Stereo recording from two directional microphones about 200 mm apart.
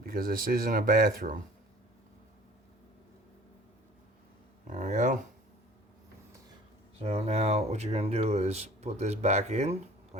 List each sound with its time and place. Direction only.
0.0 s speech: 45° right (ahead or behind)
4.6 s speech: 40° right (ahead or behind)
7.0 s speech: 30° right (ahead or behind)